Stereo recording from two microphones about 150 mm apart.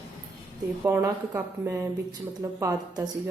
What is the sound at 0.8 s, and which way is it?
A woman's voice, 15° right (ahead or behind).